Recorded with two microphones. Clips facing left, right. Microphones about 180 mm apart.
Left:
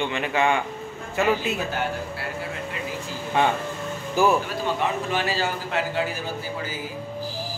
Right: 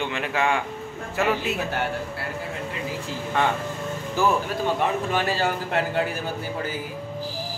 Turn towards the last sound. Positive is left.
turn(degrees=-55)  # may be behind; listen again after turning